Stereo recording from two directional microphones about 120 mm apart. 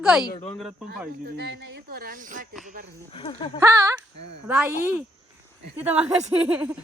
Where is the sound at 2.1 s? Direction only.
90° right.